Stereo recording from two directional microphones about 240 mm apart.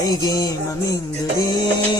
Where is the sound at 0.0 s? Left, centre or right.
Centre.